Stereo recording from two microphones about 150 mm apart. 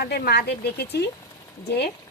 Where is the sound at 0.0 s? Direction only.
90° left.